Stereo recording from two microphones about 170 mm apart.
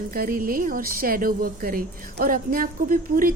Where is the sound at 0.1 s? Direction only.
60° right (ahead or behind).